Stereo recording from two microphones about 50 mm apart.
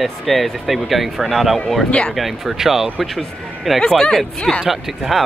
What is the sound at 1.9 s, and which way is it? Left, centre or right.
Speech, centre.